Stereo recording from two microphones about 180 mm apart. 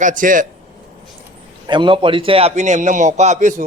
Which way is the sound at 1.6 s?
25° right (ahead or behind).